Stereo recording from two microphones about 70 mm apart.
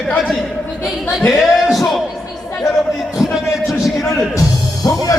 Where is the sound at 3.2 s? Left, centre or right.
Centre.